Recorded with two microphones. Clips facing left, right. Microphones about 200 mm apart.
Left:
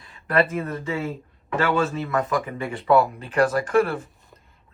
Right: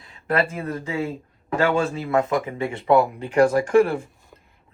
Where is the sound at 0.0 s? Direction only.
30° right (ahead or behind).